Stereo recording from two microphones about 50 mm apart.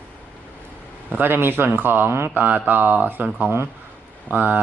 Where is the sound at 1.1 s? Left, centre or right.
Right.